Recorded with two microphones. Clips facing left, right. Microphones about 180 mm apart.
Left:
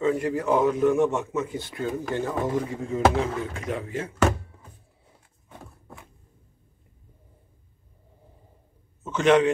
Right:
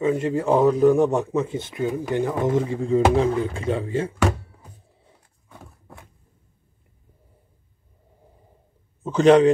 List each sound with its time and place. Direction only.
0.0 s a man's voice: 20° right (ahead or behind)
9.0 s a man's voice: 35° right (ahead or behind)